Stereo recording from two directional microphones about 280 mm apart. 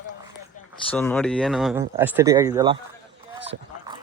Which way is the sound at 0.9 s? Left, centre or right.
Centre.